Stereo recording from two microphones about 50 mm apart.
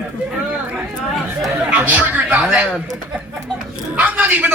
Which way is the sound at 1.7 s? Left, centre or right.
Right.